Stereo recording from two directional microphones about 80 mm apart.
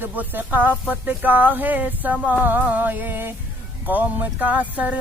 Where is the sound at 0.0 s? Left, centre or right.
Right.